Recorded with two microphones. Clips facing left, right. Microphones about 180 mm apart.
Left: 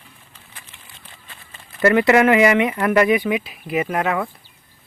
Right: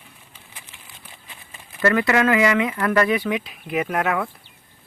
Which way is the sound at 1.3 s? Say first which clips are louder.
Even; 15° right (ahead or behind).